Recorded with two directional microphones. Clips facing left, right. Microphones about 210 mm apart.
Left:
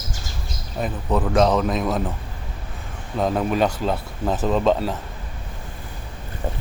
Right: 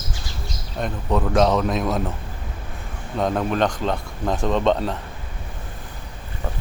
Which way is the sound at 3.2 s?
5° left (ahead or behind).